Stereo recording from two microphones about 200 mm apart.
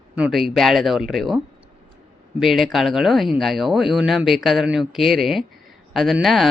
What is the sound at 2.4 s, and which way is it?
Speech, centre (ahead or behind).